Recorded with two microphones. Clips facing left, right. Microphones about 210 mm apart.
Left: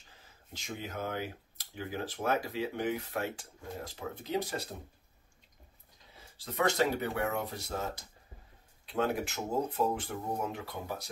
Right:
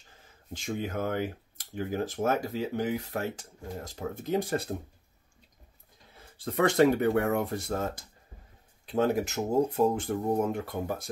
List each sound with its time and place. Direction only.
0.5 s speech: 50° right (ahead or behind)
6.1 s speech: 55° right (ahead or behind)